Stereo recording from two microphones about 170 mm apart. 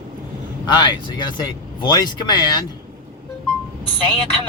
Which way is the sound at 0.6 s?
25° left (ahead or behind).